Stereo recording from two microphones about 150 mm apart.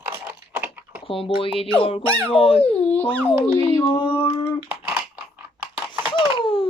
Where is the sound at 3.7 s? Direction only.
25° left (ahead or behind).